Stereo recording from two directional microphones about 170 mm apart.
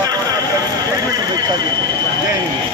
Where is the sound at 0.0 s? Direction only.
25° right (ahead or behind).